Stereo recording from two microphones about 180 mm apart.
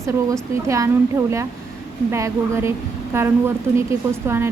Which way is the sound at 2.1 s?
15° right (ahead or behind).